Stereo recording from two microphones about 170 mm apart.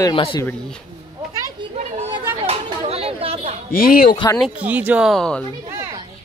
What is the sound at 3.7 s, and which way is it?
Speech, 60° left (ahead or behind).